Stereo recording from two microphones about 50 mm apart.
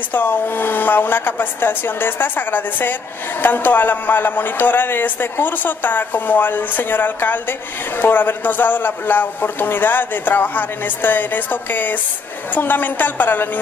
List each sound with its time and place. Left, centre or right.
0.1 s a man's voice: left